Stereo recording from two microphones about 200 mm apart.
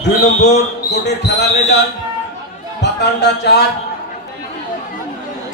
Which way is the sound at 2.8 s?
55° left (ahead or behind).